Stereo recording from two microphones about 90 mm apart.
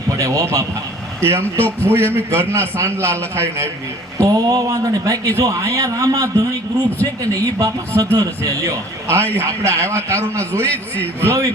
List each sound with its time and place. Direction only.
0.1 s a sound: 35° right (ahead or behind)
1.2 s a man's voice: 30° right (ahead or behind)
4.2 s a man's voice: 40° right (ahead or behind)
10.7 s a man's voice: 20° left (ahead or behind)
11.2 s a man's voice: 30° right (ahead or behind)